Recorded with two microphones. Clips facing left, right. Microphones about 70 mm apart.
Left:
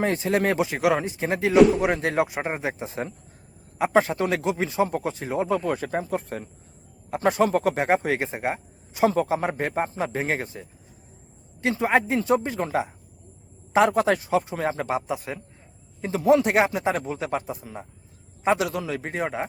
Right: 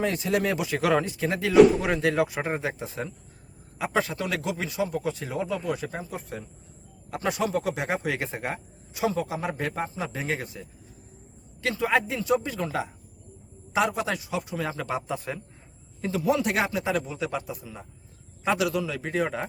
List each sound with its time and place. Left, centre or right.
0.0 s a man's voice: left
0.8 s speech: centre
1.5 s speech: centre
1.8 s speech: left
5.0 s speech: left
5.4 s a man's voice: left
8.2 s a man's voice: left
11.6 s a man's voice: left
14.8 s a man's voice: centre
16.0 s a man's voice: left
19.2 s speech: left